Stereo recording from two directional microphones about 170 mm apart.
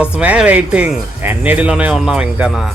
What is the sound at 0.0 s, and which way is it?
Speech, 5° right (ahead or behind).